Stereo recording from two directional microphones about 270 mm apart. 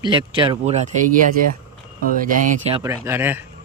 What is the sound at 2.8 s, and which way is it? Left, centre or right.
Speech, centre.